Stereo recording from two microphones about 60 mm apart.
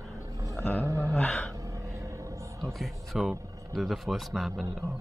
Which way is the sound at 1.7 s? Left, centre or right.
Right.